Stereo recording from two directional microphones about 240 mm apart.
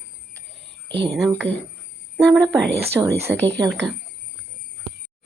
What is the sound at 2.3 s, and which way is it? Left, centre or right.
Speech, centre.